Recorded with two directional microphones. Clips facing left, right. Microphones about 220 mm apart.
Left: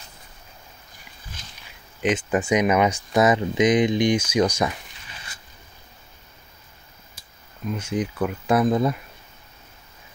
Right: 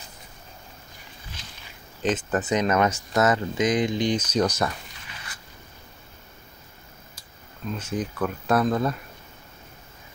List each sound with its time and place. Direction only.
1.4 s a sound: 50° left (ahead or behind)
2.0 s speech: 10° left (ahead or behind)
7.7 s speech: 10° left (ahead or behind)